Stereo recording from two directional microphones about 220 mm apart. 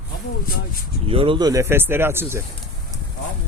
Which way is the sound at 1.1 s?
25° right (ahead or behind).